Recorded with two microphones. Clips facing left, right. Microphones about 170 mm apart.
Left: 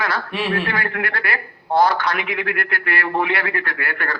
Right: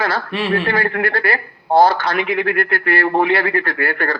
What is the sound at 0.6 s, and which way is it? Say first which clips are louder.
A man's voice: right 5 dB; 35° right (ahead or behind).